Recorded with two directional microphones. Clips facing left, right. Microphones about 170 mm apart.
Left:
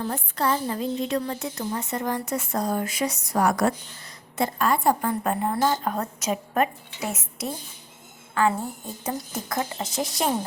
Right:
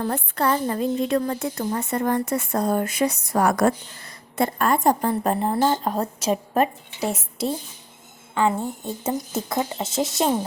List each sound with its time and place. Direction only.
0.0 s a woman's voice: 60° right (ahead or behind); by 10.2 s 25° right (ahead or behind)